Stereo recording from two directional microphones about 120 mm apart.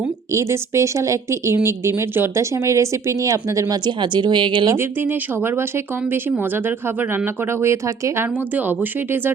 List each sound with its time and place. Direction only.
0.3 s speech: 25° right (ahead or behind); by 4.7 s 40° right (ahead or behind)
4.7 s speech: 20° right (ahead or behind)